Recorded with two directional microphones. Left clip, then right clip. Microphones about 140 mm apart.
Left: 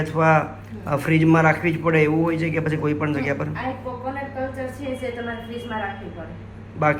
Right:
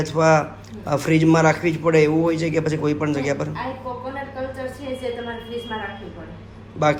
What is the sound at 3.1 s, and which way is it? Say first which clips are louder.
Speech: right 1 dB; 25° right (ahead or behind).